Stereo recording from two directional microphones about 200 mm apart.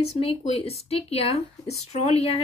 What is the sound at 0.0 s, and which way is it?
Speech, 30° left (ahead or behind).